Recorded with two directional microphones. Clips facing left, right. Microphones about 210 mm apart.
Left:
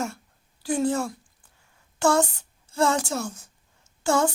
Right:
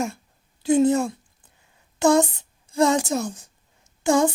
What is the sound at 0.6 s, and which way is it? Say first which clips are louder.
A woman's voice: right 6 dB; 20° right (ahead or behind).